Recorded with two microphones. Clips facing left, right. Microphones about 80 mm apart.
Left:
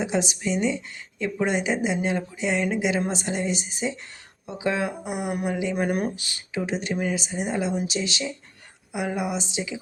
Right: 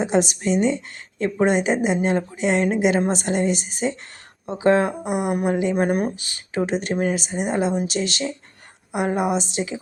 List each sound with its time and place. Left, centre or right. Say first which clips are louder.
0.0 s a woman's voice: right 5 dB; right
4.4 s a woman's voice: right 8 dB; right
5.7 s speech: right 4 dB; right
7.2 s a woman's voice: right 4 dB; right